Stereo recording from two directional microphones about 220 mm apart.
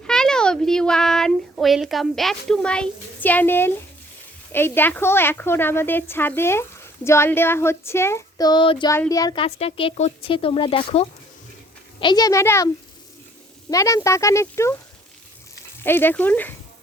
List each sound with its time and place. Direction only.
0.1 s a sound: 5° left (ahead or behind)
4.5 s a woman's voice: 10° left (ahead or behind)
15.8 s a woman's voice: 10° left (ahead or behind)